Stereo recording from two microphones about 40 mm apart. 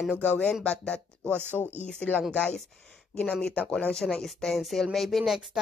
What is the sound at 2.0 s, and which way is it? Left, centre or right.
Speech, left.